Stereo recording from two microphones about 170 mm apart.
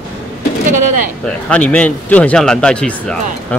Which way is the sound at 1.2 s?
5° left (ahead or behind).